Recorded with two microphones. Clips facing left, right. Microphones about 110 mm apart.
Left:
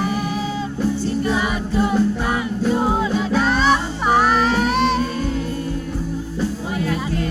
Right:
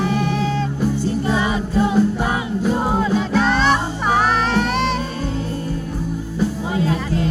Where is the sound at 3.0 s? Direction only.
5° left (ahead or behind).